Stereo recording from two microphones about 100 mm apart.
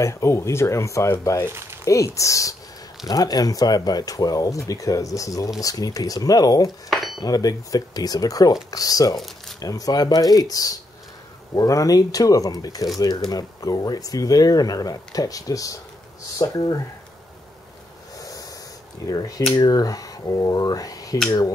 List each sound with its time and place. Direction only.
0.0 s speech: 30° left (ahead or behind)
1.4 s speech: 25° right (ahead or behind)
1.9 s speech: 30° left (ahead or behind)
18.2 s a sound: 35° left (ahead or behind)
19.0 s speech: 35° left (ahead or behind)